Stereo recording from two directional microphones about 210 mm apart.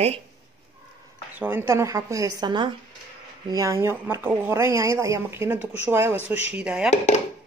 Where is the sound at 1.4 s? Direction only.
10° right (ahead or behind).